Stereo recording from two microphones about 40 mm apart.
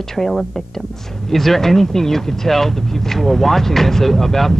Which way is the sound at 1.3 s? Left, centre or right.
Centre.